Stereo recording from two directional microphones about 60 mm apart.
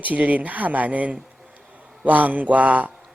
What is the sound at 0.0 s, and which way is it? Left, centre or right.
A man's voice, right.